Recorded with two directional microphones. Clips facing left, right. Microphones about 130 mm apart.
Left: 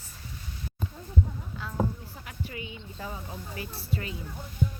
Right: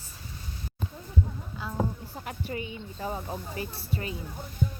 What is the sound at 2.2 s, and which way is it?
Speech, 35° right (ahead or behind).